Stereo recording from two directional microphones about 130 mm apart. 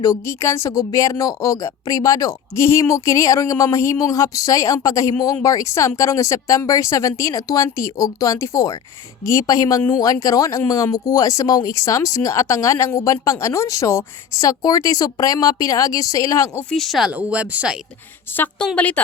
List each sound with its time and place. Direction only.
0.0 s speech: 25° left (ahead or behind)
16.6 s speech: centre (ahead or behind)
18.3 s speech: 20° left (ahead or behind)